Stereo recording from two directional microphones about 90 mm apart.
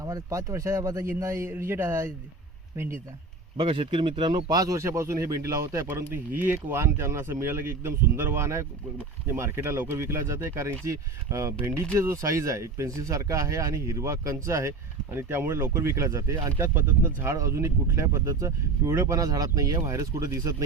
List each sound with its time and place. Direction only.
0.0 s speech: 35° right (ahead or behind)
3.6 s speech: 65° right (ahead or behind); by 4.8 s 45° right (ahead or behind)
4.8 s speech: 30° right (ahead or behind)